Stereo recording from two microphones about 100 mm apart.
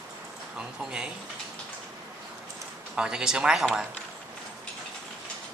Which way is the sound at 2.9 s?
10° right (ahead or behind).